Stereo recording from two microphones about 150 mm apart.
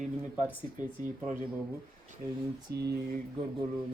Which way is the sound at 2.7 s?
90° right.